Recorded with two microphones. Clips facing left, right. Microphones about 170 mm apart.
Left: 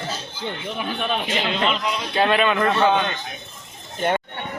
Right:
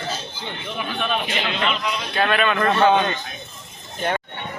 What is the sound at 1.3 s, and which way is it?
Speech, 30° left (ahead or behind).